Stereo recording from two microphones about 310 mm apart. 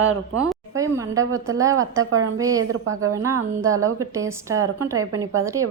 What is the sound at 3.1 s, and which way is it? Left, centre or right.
A woman's voice, centre.